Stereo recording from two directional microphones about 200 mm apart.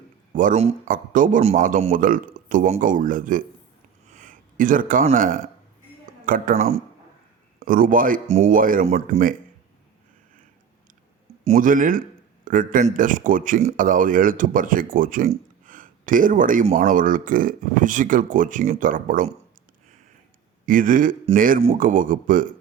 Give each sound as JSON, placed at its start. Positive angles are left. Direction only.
{"t": 0.3, "sound": "speech", "side_deg": -35}
{"t": 7.6, "sound": "a man's voice", "side_deg": -45}
{"t": 11.4, "sound": "a man's voice", "side_deg": -40}
{"t": 20.7, "sound": "a man's voice", "side_deg": -45}